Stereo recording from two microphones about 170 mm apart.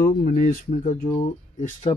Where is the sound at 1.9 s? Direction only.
35° left (ahead or behind).